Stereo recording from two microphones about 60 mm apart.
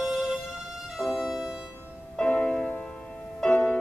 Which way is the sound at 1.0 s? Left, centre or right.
Centre.